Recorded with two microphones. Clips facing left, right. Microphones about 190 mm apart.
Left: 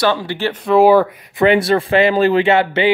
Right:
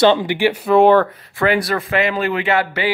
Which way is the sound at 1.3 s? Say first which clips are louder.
Left 5 dB; 25° left (ahead or behind).